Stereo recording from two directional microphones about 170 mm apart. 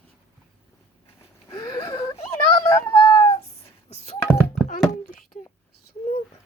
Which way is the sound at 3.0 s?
30° left (ahead or behind).